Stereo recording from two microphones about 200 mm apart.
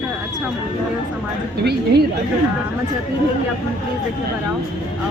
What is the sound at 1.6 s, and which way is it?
Speech, 55° right (ahead or behind).